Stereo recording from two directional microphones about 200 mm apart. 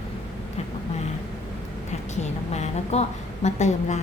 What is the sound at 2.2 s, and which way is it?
A woman's voice, 35° left (ahead or behind).